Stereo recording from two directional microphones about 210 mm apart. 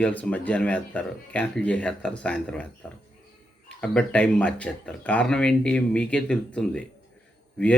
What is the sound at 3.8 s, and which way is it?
Speech, 5° left (ahead or behind).